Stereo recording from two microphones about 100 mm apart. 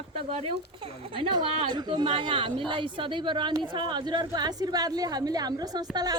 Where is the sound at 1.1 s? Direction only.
55° right (ahead or behind).